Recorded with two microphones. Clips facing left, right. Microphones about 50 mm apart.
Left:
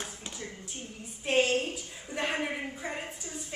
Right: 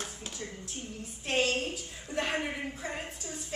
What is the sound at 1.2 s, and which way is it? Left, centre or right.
Clapping, centre.